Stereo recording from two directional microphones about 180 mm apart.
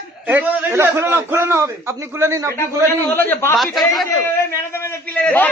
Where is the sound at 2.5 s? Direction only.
10° left (ahead or behind).